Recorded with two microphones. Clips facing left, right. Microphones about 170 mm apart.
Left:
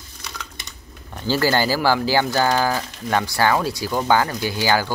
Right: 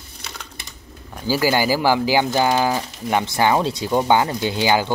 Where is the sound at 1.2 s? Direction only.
10° right (ahead or behind).